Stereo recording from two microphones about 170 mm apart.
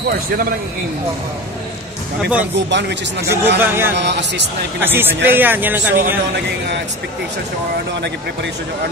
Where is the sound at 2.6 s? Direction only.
90° right.